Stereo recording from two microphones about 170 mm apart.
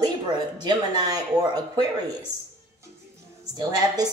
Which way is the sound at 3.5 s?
25° right (ahead or behind).